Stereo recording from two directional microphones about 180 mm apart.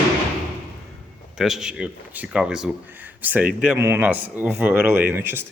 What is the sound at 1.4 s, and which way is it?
Speech, centre (ahead or behind).